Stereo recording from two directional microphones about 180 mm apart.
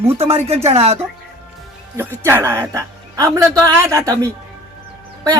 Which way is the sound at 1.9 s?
15° right (ahead or behind).